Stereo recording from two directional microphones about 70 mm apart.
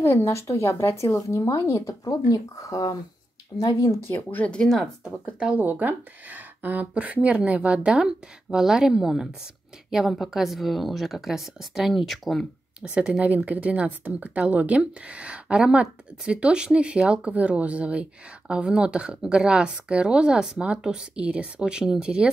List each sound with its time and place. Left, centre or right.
0.0 s speech: left
2.0 s speech: left
4.1 s speech: left
4.5 s speech: centre
5.6 s a woman's voice: right; by 12.4 s centre
12.8 s speech: centre